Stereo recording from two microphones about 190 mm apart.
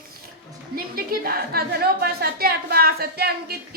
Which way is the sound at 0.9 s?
50° right (ahead or behind).